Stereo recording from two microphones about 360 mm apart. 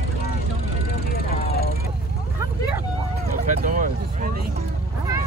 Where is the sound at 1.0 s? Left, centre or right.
Left.